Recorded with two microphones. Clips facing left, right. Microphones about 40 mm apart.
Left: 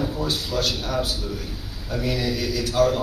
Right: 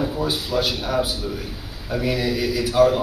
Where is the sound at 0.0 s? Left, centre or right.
Centre.